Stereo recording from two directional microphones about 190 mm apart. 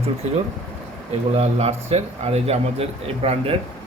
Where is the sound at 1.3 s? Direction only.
35° right (ahead or behind).